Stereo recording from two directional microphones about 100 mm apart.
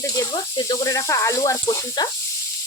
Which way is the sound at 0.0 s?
40° left (ahead or behind).